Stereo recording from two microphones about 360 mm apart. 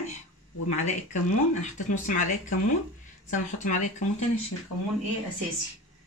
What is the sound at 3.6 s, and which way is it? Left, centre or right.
Speech, centre.